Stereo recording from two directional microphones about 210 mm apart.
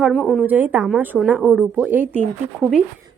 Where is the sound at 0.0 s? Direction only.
Centre (ahead or behind).